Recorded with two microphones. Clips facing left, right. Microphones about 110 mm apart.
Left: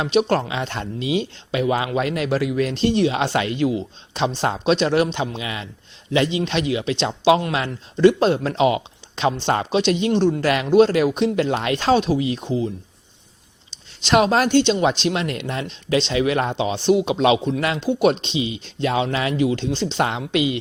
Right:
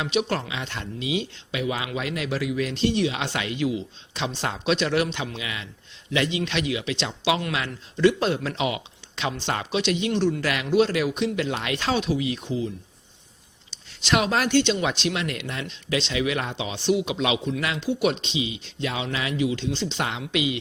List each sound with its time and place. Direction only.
0.0 s speech: 40° left (ahead or behind)
14.1 s speech: 35° left (ahead or behind)